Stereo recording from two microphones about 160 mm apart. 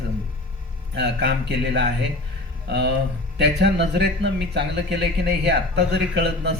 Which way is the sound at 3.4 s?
90° right.